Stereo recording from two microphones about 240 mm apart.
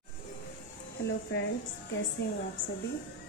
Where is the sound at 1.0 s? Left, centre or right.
Left.